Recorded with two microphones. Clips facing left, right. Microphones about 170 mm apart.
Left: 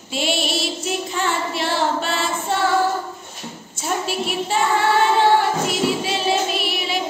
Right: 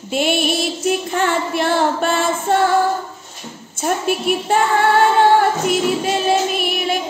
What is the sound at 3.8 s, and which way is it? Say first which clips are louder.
Speech: right 4 dB; 55° right (ahead or behind).